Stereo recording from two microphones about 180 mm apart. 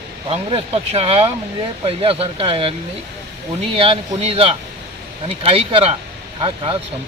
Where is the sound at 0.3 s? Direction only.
35° right (ahead or behind).